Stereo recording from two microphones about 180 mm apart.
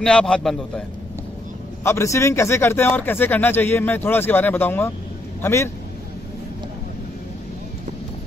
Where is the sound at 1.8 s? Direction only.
15° left (ahead or behind).